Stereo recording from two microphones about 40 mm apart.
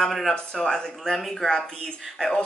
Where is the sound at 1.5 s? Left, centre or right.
Centre.